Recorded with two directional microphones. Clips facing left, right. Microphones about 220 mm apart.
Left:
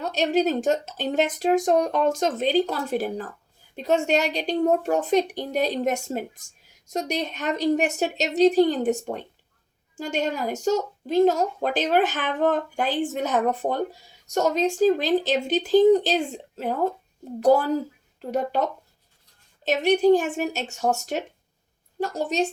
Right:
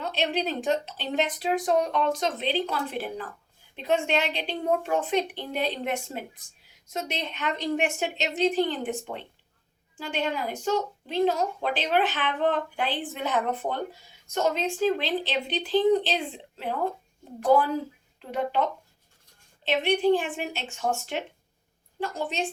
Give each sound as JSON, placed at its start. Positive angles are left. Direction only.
{"t": 0.0, "sound": "a woman's voice", "side_deg": 45}